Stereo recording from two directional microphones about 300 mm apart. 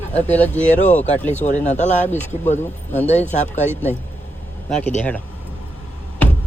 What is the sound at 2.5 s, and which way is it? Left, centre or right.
Speech, centre.